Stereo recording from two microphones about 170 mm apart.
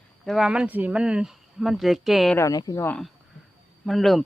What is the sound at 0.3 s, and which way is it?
Speech, centre (ahead or behind).